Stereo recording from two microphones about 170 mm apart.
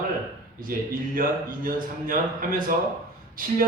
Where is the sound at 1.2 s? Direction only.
55° right (ahead or behind).